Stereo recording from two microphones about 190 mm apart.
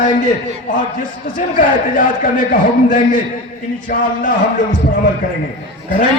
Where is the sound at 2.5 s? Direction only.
45° left (ahead or behind).